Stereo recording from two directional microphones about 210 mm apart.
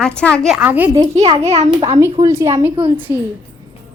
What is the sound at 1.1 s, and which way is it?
Speech, 30° right (ahead or behind).